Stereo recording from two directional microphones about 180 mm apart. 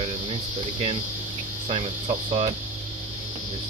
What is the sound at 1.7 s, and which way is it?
Speech, 35° right (ahead or behind).